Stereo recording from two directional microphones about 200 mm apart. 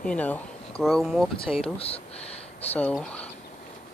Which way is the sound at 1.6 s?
30° left (ahead or behind).